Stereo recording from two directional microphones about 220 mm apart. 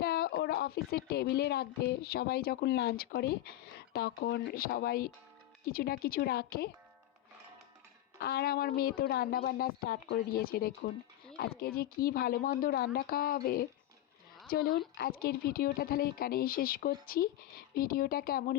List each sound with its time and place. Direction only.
0.0 s a woman's voice: 45° left (ahead or behind)
8.2 s a woman's voice: 50° left (ahead or behind)